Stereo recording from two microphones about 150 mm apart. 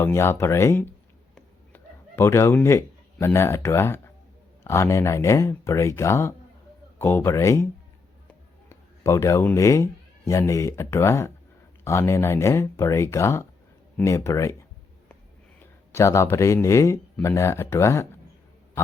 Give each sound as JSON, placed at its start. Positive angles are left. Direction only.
{"t": 0.0, "sound": "speech", "side_deg": 15}
{"t": 1.4, "sound": "chicken", "side_deg": 15}
{"t": 2.6, "sound": "speech", "side_deg": 15}
{"t": 15.9, "sound": "speech", "side_deg": 20}